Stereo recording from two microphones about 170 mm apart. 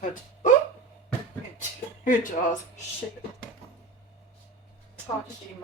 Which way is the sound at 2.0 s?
50° left (ahead or behind).